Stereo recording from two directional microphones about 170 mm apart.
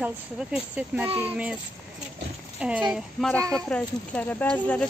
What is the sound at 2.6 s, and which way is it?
Speech, 5° right (ahead or behind).